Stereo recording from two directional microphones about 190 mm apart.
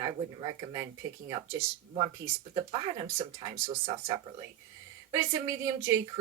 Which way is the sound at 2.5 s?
25° right (ahead or behind).